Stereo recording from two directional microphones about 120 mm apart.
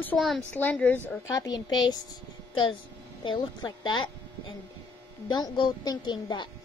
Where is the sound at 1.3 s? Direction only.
30° left (ahead or behind).